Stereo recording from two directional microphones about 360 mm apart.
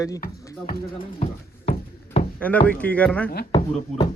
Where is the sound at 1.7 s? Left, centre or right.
Centre.